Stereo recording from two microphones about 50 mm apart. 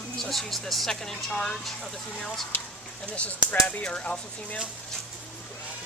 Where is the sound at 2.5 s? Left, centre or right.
Left.